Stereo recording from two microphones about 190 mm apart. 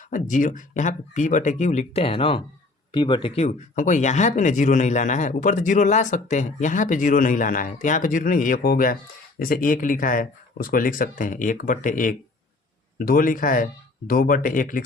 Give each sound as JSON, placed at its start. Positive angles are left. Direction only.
{"t": 0.1, "sound": "speech", "side_deg": 45}